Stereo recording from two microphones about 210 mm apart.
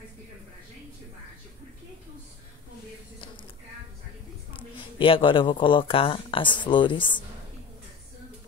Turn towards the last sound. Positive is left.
turn(degrees=20)  # may be behind; listen again after turning